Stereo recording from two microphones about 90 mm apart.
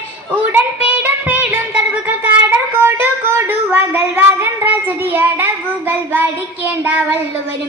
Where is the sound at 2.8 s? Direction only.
25° right (ahead or behind).